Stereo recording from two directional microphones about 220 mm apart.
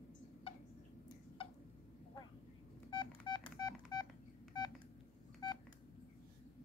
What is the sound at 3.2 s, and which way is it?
Telephone dialing, 20° left (ahead or behind).